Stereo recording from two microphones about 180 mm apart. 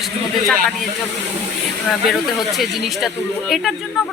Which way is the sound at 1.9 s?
Centre (ahead or behind).